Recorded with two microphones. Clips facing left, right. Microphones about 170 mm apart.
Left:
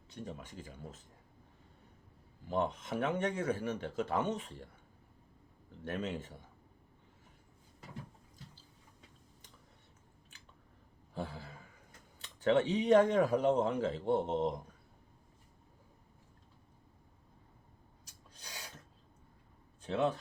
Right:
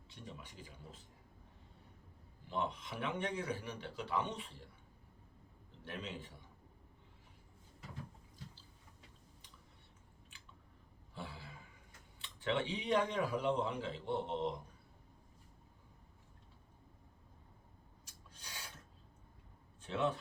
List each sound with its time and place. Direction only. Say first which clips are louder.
0.1 s speech: left 7 dB; 45° left (ahead or behind)
2.5 s speech: left 6 dB; 45° left (ahead or behind)
5.8 s speech: left 8 dB; 45° left (ahead or behind)
11.1 s a sound: left 7 dB; 45° left (ahead or behind)
12.2 s speech: left 8 dB; 45° left (ahead or behind)
19.9 s speech: left 4 dB; 40° left (ahead or behind)